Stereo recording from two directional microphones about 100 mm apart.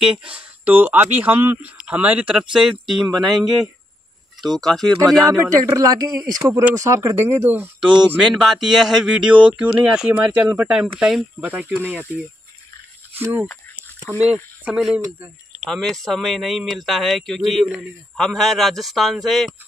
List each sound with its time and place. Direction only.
0.0 s speech: 10° right (ahead or behind)
4.4 s a man's voice: 5° left (ahead or behind)
5.2 s a man's voice: 35° right (ahead or behind); by 7.9 s 20° right (ahead or behind)
8.2 s a man's voice: 5° right (ahead or behind)
11.4 s speech: 15° right (ahead or behind)
13.1 s speech: 20° right (ahead or behind)
15.6 s a man's voice: centre (ahead or behind)